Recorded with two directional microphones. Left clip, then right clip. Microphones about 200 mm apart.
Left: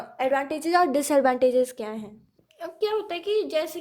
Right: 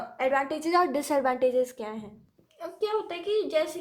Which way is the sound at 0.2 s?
25° left (ahead or behind).